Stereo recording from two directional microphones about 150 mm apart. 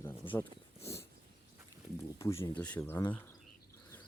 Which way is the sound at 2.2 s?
20° left (ahead or behind).